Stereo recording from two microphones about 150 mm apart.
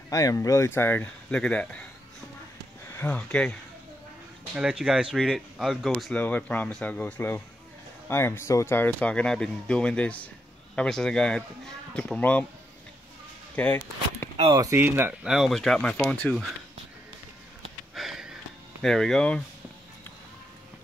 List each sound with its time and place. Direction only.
0.1 s speech: 20° left (ahead or behind); by 1.9 s 5° left (ahead or behind)
2.9 s speech: 15° left (ahead or behind)
4.6 s speech: 5° right (ahead or behind)
6.2 s speech: 10° left (ahead or behind)
13.6 s speech: 10° left (ahead or behind)
14.3 s a sound: 40° right (ahead or behind)
14.6 s speech: 15° right (ahead or behind)
15.2 s speech: 5° right (ahead or behind)
17.9 s sniff: centre (ahead or behind)
18.8 s speech: 5° left (ahead or behind)